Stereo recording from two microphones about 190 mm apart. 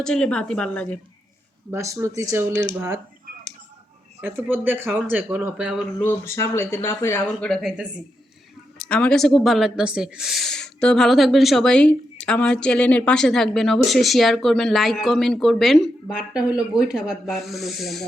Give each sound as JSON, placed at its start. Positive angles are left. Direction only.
{"t": 0.0, "sound": "speech", "side_deg": 5}
{"t": 1.7, "sound": "speech", "side_deg": -15}
{"t": 4.2, "sound": "speech", "side_deg": -10}
{"t": 6.0, "sound": "speech", "side_deg": 10}